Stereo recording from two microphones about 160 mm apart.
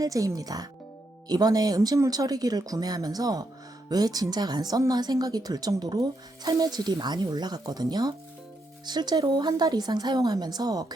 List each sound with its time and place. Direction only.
0.0 s speech: 20° right (ahead or behind)